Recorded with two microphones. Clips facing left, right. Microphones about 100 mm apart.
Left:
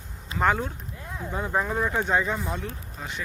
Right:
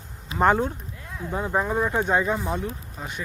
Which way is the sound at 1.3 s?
10° right (ahead or behind).